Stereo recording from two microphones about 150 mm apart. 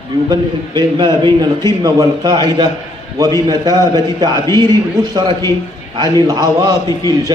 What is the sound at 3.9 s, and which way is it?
A man's voice, 25° right (ahead or behind).